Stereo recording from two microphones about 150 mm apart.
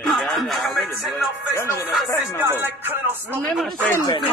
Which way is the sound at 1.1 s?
20° left (ahead or behind).